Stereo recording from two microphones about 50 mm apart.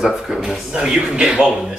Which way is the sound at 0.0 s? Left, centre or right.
Centre.